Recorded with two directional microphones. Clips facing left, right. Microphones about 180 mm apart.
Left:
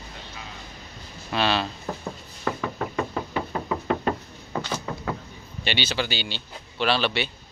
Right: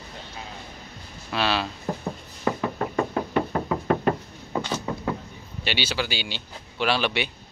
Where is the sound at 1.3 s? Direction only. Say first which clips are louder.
Left 1 dB; 5° right (ahead or behind).